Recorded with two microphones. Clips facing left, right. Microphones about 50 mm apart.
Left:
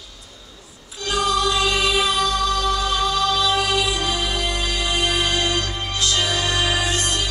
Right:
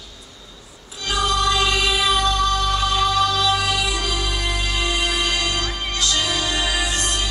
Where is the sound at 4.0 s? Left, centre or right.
Left.